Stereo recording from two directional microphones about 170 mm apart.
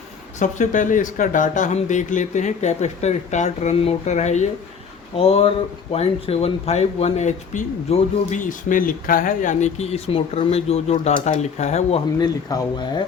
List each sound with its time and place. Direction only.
0.3 s speech: 45° left (ahead or behind)
12.2 s speech: 20° left (ahead or behind)